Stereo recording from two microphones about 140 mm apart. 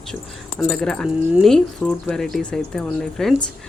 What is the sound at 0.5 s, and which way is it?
Speech, 5° left (ahead or behind).